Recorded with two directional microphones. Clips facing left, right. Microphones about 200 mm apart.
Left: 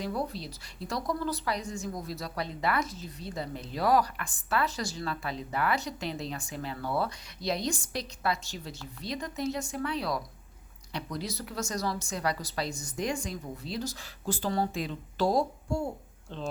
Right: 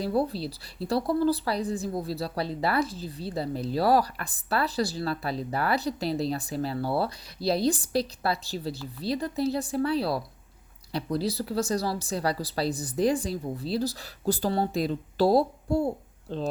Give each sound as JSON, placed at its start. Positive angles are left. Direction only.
{"t": 0.0, "sound": "a woman's voice", "side_deg": -30}